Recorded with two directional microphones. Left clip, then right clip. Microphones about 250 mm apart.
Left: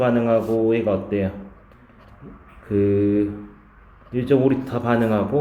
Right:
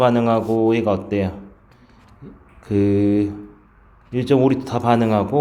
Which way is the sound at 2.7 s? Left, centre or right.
Right.